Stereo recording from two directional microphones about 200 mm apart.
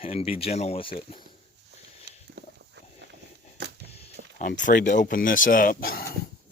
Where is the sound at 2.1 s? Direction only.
55° right (ahead or behind).